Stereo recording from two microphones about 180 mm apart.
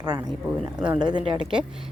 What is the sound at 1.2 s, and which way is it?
Speech, 30° right (ahead or behind).